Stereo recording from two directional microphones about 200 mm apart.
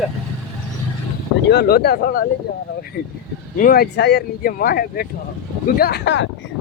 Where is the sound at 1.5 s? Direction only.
55° left (ahead or behind).